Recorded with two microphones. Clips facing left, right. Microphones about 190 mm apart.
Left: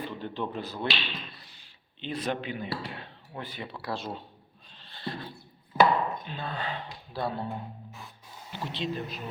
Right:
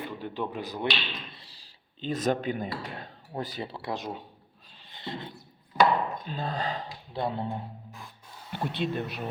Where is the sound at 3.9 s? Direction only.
15° right (ahead or behind).